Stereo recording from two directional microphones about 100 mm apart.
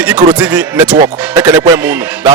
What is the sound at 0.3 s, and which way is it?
Speech, 15° right (ahead or behind).